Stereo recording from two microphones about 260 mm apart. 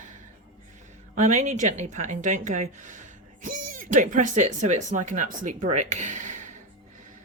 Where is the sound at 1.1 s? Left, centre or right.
Right.